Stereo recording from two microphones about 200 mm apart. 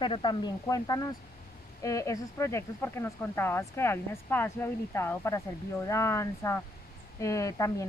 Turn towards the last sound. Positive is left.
turn(degrees=15)  # may be behind; listen again after turning